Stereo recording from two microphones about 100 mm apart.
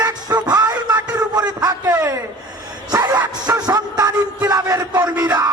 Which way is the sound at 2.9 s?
40° right (ahead or behind).